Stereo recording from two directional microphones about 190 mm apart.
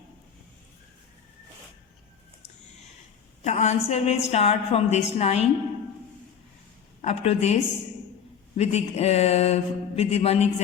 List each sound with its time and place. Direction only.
3.4 s a woman's voice: 35° left (ahead or behind)
7.0 s a woman's voice: 35° left (ahead or behind)